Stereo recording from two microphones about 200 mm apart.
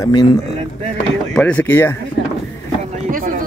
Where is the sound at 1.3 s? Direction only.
5° left (ahead or behind).